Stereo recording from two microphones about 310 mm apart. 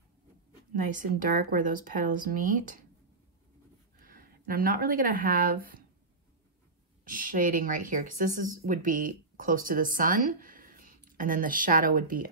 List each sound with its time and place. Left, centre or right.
0.7 s speech: right
4.0 s speech: right
7.1 s speech: right